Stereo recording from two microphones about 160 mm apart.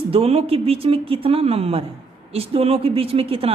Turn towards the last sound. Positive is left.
turn(degrees=-40)  # may be behind; listen again after turning